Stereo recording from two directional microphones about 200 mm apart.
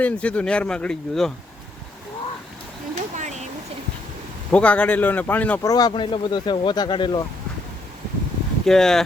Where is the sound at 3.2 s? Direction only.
35° right (ahead or behind).